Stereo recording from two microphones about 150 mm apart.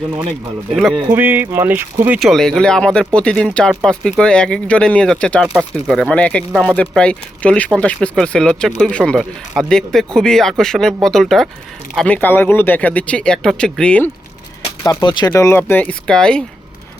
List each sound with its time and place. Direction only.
1.1 s speech: 10° right (ahead or behind)
2.1 s speech: centre (ahead or behind)
14.6 s speech: 30° left (ahead or behind)
15.3 s speech: 15° left (ahead or behind)